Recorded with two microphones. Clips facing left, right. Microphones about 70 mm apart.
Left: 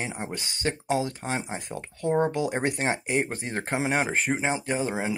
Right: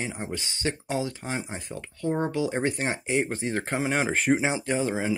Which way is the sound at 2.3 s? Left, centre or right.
Left.